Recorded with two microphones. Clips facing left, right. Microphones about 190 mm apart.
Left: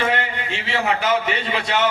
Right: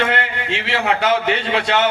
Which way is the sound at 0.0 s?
70° right (ahead or behind).